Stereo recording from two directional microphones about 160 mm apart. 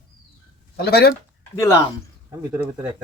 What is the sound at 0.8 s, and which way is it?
Speech, 80° left.